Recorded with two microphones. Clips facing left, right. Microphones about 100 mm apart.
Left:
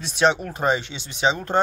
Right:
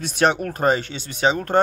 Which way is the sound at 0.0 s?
50° right (ahead or behind).